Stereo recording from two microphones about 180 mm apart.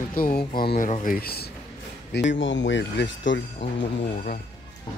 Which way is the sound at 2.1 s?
90° left.